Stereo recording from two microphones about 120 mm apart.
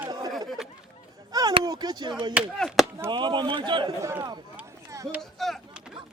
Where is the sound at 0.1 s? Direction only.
35° right (ahead or behind).